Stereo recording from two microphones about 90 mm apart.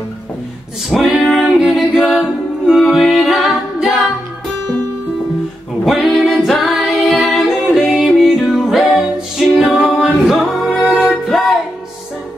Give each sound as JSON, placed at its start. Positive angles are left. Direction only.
{"t": 0.8, "sound": "a capella", "side_deg": -5}
{"t": 5.9, "sound": "music", "side_deg": 0}
{"t": 9.6, "sound": "a capella", "side_deg": -5}